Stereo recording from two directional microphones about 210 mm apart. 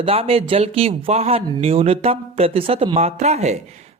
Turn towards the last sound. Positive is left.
turn(degrees=-30)  # may be behind; listen again after turning